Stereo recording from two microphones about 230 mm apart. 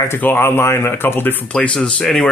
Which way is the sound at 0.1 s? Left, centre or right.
Centre.